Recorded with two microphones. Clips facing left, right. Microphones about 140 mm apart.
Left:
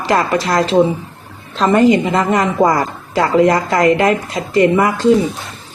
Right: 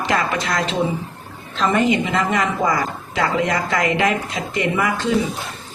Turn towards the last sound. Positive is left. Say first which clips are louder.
# left 8 dB
turn(degrees=40)  # may be behind; listen again after turning